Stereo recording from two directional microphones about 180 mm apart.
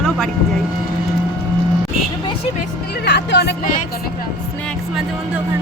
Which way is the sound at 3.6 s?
45° left (ahead or behind).